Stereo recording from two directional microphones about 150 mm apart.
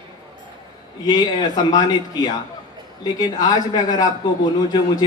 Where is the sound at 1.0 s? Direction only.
30° left (ahead or behind).